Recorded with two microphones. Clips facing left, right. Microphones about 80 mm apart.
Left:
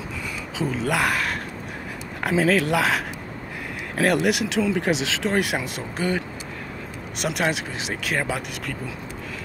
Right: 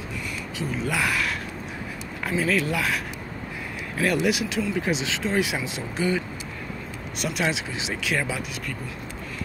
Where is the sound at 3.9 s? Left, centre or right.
Left.